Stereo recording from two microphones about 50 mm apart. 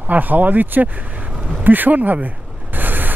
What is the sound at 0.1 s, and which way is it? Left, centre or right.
Speech, right.